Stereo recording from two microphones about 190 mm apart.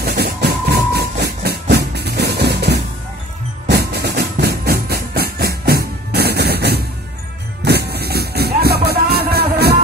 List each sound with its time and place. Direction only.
0.0 s train: 55° right (ahead or behind)
3.6 s music: 60° right (ahead or behind)